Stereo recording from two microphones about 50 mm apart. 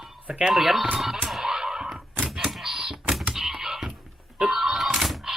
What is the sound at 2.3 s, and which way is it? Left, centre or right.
Typewriter, centre.